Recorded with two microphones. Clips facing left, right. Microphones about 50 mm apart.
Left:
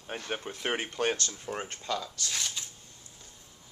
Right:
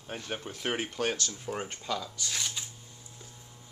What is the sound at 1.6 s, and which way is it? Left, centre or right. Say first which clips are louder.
Speech: even; centre.